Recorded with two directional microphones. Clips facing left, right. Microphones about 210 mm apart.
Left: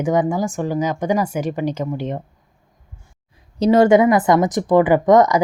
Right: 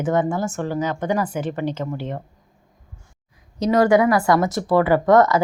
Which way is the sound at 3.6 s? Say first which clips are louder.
Left 4 dB; 25° left (ahead or behind).